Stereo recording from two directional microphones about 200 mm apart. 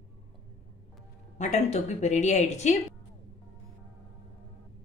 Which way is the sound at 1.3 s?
35° left (ahead or behind).